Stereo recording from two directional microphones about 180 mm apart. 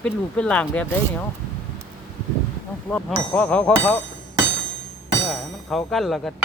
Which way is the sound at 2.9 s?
5° left (ahead or behind).